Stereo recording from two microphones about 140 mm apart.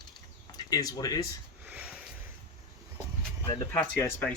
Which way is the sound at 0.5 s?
25° left (ahead or behind).